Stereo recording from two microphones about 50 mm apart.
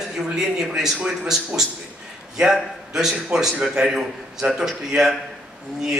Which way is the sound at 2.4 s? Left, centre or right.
Centre.